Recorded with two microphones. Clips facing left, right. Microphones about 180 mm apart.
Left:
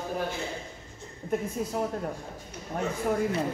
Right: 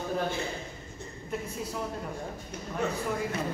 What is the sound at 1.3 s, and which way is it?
Speech, 50° left (ahead or behind).